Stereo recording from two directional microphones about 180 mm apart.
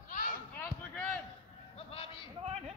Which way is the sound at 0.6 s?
10° left (ahead or behind).